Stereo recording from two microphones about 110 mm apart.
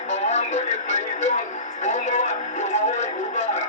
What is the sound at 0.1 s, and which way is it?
Music, 90° left.